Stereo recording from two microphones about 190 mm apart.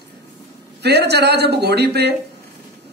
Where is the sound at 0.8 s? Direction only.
60° right (ahead or behind).